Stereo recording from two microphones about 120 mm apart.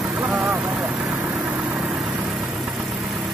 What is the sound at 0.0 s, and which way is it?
Vehicle, 5° right (ahead or behind).